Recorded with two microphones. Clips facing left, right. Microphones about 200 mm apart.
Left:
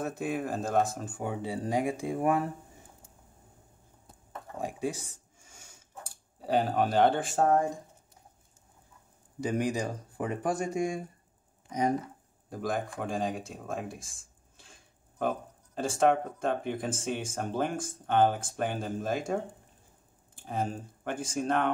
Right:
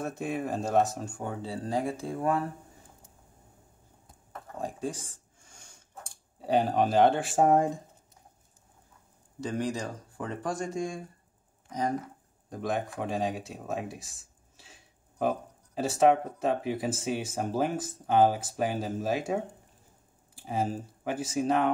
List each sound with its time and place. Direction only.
0.0 s speech: centre (ahead or behind)
4.6 s speech: 10° left (ahead or behind); by 7.7 s 20° right (ahead or behind)
9.4 s speech: 15° left (ahead or behind)
12.4 s speech: centre (ahead or behind)